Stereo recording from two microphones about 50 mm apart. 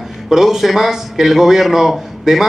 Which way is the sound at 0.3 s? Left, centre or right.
Centre.